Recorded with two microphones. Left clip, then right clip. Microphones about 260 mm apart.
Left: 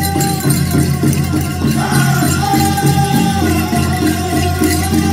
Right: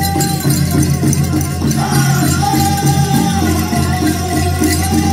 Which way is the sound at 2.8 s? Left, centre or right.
Right.